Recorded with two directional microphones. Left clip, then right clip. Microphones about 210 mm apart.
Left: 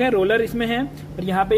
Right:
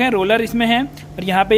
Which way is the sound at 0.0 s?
35° right (ahead or behind).